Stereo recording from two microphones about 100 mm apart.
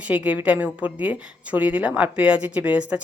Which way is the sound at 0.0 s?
15° right (ahead or behind).